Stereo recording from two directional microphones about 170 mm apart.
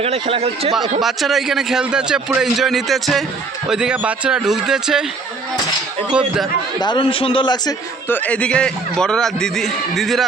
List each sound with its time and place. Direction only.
0.0 s speech: 35° right (ahead or behind)
1.0 s a man's voice: centre (ahead or behind)
6.7 s a man's voice: 25° left (ahead or behind)
8.0 s a man's voice: 10° left (ahead or behind)